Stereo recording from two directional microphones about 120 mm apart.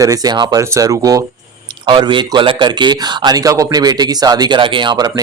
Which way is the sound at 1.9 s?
40° right (ahead or behind).